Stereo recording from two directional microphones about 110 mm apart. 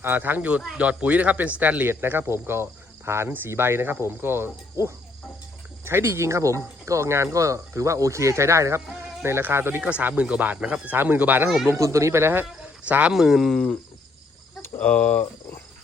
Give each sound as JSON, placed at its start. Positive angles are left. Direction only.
{"t": 0.0, "sound": "speech", "side_deg": -20}
{"t": 11.7, "sound": "speech", "side_deg": -25}
{"t": 14.6, "sound": "speech", "side_deg": 15}